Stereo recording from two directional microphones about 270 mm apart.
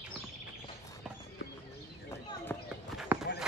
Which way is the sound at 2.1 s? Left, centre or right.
Centre.